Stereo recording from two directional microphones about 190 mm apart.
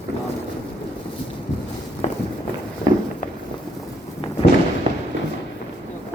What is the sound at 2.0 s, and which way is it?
Walk, 35° left (ahead or behind).